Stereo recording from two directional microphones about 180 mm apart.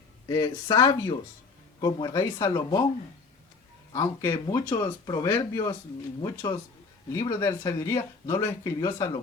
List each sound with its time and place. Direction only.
0.3 s speech: 20° left (ahead or behind)
3.9 s speech: 20° left (ahead or behind)